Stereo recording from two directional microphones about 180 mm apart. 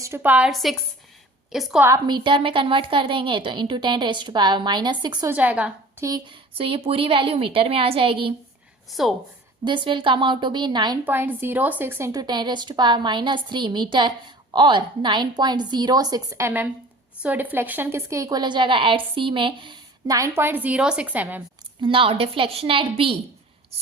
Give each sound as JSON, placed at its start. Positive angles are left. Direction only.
{"t": 0.0, "sound": "a woman's voice", "side_deg": -10}
{"t": 1.9, "sound": "a woman's voice", "side_deg": -25}
{"t": 5.3, "sound": "a woman's voice", "side_deg": -10}
{"t": 6.1, "sound": "a woman's voice", "side_deg": -20}
{"t": 8.9, "sound": "a woman's voice", "side_deg": 0}
{"t": 9.6, "sound": "a woman's voice", "side_deg": -25}
{"t": 11.0, "sound": "a woman's voice", "side_deg": -10}
{"t": 21.8, "sound": "a woman's voice", "side_deg": -30}